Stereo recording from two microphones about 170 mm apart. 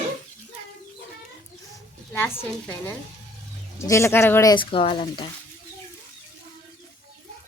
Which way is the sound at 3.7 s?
15° left (ahead or behind).